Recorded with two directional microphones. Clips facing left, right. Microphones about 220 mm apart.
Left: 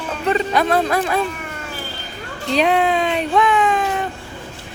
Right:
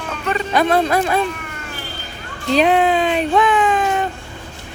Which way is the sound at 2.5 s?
Centre (ahead or behind).